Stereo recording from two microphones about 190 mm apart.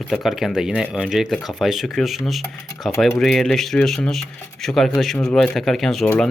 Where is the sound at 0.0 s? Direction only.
Centre (ahead or behind).